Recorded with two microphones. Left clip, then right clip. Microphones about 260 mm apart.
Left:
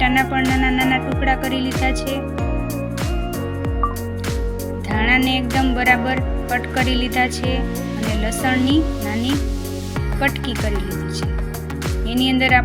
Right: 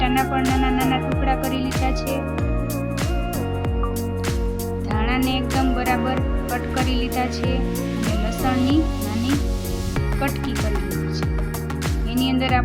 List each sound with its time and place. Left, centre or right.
0.0 s music: centre
4.9 s music: centre
8.8 s speech: centre
12.2 s music: centre